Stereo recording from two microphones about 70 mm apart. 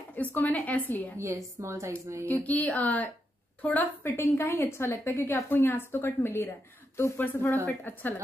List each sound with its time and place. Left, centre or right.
0.1 s speech: left
1.1 s a woman's voice: right
1.9 s a woman's voice: right
2.2 s speech: left
4.0 s a woman's voice: left